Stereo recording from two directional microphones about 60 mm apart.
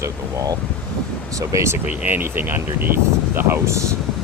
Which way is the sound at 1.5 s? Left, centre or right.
Right.